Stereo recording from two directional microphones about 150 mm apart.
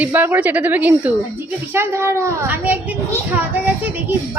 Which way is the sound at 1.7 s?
15° right (ahead or behind).